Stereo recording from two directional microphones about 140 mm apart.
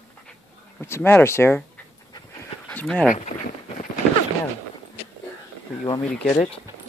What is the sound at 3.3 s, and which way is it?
Speech, 90° left.